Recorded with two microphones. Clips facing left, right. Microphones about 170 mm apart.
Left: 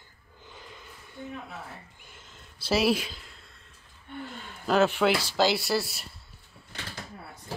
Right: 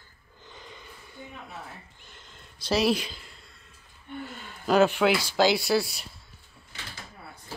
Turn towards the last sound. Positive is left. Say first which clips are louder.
# right 3 dB
turn(degrees=0)  # may be behind; listen again after turning